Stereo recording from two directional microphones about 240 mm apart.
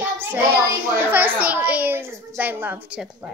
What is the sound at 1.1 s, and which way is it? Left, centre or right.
A child's voice, centre.